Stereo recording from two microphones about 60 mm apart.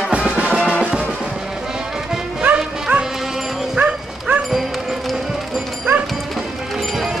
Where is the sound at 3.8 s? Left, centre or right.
Right.